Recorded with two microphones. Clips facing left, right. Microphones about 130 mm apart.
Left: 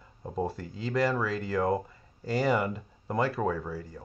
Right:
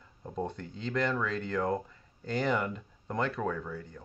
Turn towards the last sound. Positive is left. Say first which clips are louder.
# left 3 dB
turn(degrees=5)  # may be behind; listen again after turning